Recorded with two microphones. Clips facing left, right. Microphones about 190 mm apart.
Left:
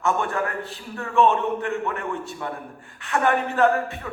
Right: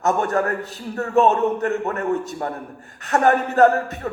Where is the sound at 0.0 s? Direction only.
40° right (ahead or behind).